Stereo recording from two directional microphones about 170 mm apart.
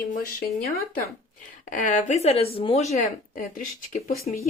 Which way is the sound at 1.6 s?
50° left (ahead or behind).